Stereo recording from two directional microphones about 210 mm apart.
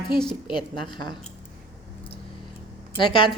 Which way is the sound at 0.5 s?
20° left (ahead or behind).